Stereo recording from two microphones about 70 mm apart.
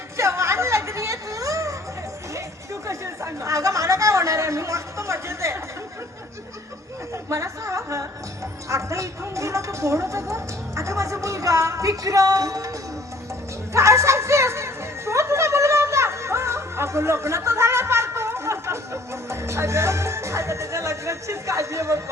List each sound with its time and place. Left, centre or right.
0.2 s a sound: right
3.4 s a woman's voice: right
7.3 s a woman's voice: right
13.7 s music: right
19.3 s a woman's voice: right